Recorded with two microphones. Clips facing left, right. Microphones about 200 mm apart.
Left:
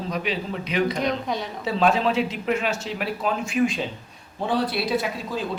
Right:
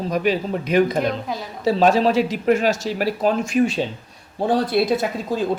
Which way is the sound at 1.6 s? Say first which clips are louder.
Right 6 dB; 40° right (ahead or behind).